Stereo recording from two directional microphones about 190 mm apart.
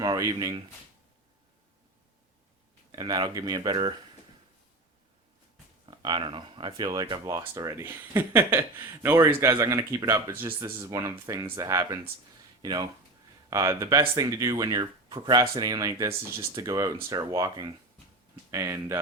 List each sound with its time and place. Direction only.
0.0 s speech: 20° right (ahead or behind)
2.9 s speech: 20° right (ahead or behind)
5.8 s speech: 25° right (ahead or behind)